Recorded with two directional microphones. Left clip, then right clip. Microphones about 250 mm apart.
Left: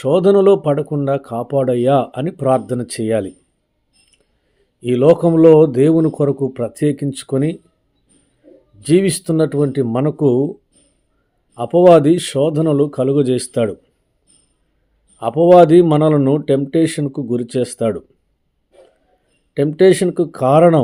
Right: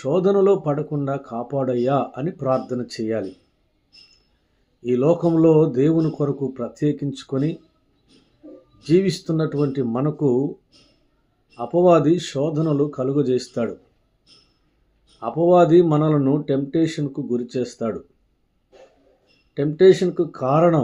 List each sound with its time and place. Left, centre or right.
0.0 s speech: left
4.8 s speech: left
8.8 s speech: left
11.5 s speech: left
15.2 s speech: left
19.5 s speech: left